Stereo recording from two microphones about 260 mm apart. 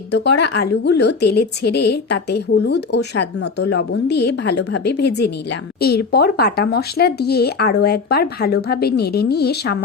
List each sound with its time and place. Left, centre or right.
0.1 s speech: left